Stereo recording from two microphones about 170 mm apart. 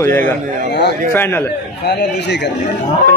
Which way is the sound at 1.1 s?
15° left (ahead or behind).